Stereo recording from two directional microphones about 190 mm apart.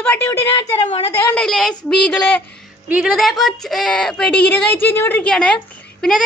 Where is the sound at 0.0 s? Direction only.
10° left (ahead or behind).